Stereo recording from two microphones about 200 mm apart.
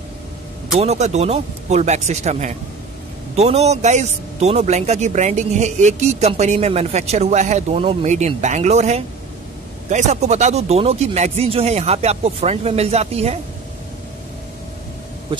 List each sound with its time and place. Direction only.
0.7 s speech: 35° right (ahead or behind)